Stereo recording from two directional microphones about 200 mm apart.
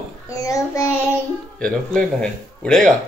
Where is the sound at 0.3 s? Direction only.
15° left (ahead or behind).